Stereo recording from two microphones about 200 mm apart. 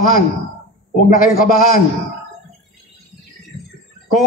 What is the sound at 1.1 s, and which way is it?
Speech, 45° left (ahead or behind).